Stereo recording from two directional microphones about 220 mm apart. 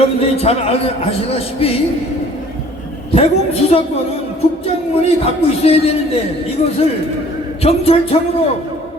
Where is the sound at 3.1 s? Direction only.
25° left (ahead or behind).